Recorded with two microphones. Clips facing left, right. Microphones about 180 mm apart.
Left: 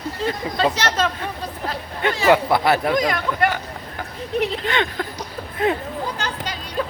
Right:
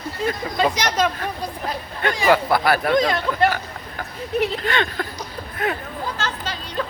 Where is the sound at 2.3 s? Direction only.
20° left (ahead or behind).